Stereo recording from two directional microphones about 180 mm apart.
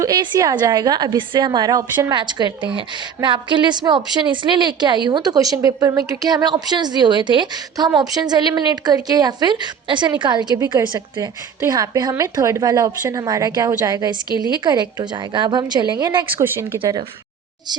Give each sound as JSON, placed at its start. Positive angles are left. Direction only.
{"t": 0.0, "sound": "a woman's voice", "side_deg": -20}
{"t": 14.3, "sound": "a woman's voice", "side_deg": 25}
{"t": 14.6, "sound": "a woman's voice", "side_deg": -25}
{"t": 16.3, "sound": "speech", "side_deg": -10}